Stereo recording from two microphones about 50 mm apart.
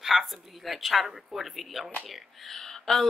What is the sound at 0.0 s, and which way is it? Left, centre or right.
Speech, centre.